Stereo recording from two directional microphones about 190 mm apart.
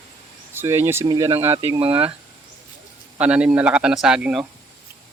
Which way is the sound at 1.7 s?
30° right (ahead or behind).